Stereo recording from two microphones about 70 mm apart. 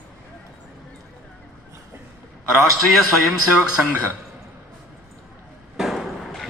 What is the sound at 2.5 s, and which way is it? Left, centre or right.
A man's voice, centre.